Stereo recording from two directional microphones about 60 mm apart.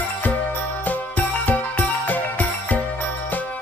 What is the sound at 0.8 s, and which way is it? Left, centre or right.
Music, left.